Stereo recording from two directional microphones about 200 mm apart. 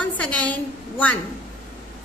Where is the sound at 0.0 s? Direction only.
5° left (ahead or behind).